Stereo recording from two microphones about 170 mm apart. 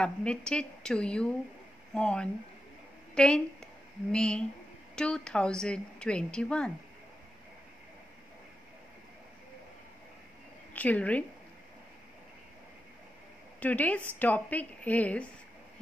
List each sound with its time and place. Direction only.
0.0 s a woman's voice: 5° left (ahead or behind)
10.7 s a woman's voice: 10° left (ahead or behind)
13.6 s a woman's voice: 10° left (ahead or behind)